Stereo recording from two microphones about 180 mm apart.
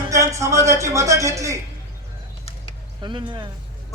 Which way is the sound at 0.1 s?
15° right (ahead or behind).